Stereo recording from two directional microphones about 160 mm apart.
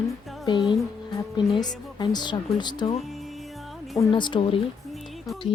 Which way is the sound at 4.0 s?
30° left (ahead or behind).